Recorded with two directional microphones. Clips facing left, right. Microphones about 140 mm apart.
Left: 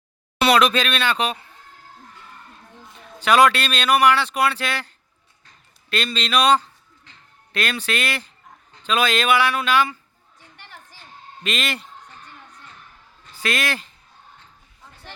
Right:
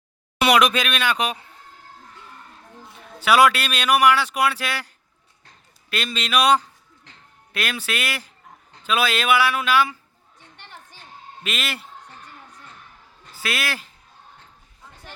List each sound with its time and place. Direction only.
0.3 s speech: 15° right (ahead or behind)
3.2 s speech: 5° right (ahead or behind)
11.4 s a man's voice: 5° right (ahead or behind)
13.3 s a man's voice: 5° right (ahead or behind)